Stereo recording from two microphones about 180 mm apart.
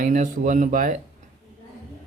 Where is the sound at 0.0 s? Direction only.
45° right (ahead or behind).